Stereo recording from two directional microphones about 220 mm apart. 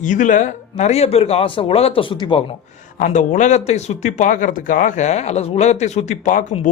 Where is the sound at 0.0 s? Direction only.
35° left (ahead or behind).